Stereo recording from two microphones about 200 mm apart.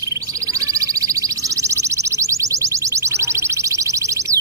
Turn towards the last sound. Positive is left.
turn(degrees=-15)  # may be behind; listen again after turning